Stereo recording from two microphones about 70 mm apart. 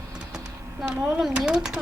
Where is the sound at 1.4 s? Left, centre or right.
Centre.